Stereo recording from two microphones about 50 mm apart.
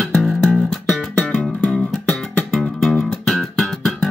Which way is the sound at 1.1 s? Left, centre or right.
Centre.